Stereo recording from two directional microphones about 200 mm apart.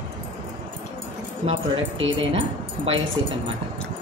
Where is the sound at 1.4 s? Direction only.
25° right (ahead or behind).